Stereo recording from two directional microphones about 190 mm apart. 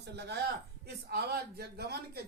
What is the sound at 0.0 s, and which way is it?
Speech, 60° right (ahead or behind).